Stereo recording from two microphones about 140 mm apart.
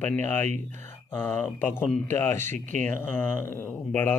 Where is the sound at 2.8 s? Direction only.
15° left (ahead or behind).